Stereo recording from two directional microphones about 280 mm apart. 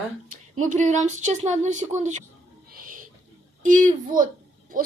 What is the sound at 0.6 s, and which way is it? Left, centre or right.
A woman's voice, right.